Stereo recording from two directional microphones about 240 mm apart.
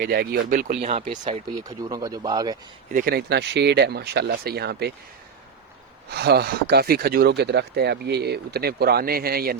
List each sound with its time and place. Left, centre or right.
0.0 s speech: right; by 2.6 s centre
2.9 s speech: right
6.1 s speech: right